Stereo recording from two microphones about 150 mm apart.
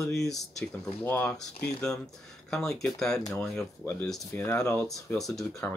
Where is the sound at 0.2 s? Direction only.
Centre (ahead or behind).